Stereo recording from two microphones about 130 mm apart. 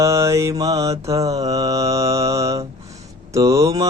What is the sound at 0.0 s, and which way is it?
Mantra, 25° right (ahead or behind).